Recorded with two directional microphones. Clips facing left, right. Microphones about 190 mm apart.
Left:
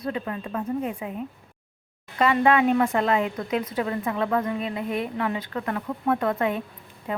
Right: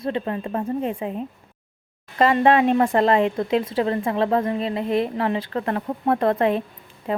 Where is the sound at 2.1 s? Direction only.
35° right (ahead or behind).